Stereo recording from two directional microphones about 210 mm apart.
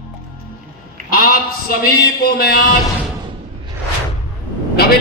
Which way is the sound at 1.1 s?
45° left (ahead or behind).